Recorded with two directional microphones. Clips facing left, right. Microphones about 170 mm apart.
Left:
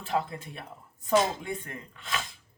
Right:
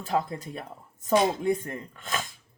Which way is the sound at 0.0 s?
40° right (ahead or behind).